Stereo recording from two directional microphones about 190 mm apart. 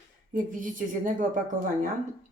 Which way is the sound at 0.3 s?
45° right (ahead or behind).